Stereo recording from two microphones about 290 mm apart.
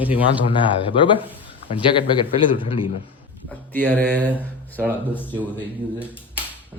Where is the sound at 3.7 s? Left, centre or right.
Centre.